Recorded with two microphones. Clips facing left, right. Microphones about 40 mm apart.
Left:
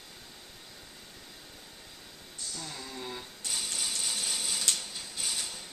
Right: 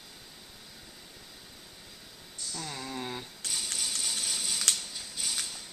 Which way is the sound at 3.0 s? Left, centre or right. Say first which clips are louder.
Right 2 dB; right.